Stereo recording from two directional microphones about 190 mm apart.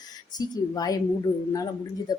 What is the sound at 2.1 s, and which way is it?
Speech, 20° left (ahead or behind).